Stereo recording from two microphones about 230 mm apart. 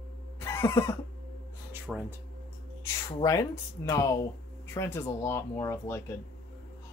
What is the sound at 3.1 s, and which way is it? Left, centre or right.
Speech, centre.